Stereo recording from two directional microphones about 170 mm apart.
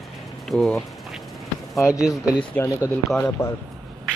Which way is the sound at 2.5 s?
15° left (ahead or behind).